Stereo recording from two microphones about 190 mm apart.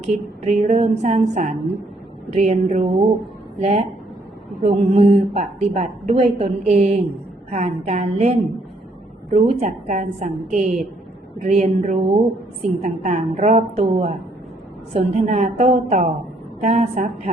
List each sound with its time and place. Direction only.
0.4 s a woman's voice: 35° right (ahead or behind)